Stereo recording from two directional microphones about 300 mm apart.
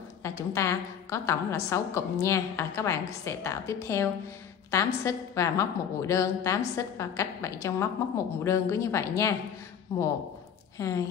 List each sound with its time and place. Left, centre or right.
0.2 s a woman's voice: centre